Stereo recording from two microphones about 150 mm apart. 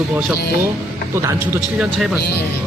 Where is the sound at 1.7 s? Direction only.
Centre (ahead or behind).